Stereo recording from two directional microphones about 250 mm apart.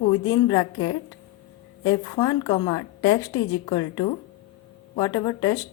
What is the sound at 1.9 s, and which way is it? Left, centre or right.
A woman's voice, centre.